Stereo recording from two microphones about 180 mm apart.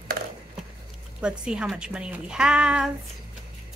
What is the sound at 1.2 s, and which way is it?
Speech, 5° right (ahead or behind).